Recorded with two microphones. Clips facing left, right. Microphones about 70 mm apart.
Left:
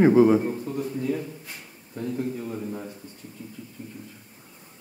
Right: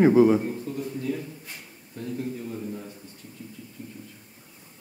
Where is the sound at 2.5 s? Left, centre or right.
Left.